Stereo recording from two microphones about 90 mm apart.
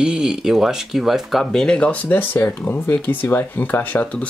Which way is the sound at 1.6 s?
10° left (ahead or behind).